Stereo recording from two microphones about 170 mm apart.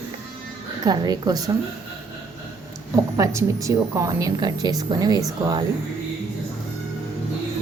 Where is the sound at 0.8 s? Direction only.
25° right (ahead or behind).